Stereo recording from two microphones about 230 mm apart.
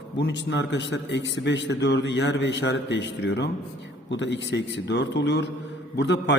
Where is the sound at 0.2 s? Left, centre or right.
Left.